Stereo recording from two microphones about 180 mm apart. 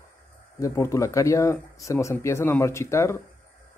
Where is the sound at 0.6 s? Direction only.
15° left (ahead or behind).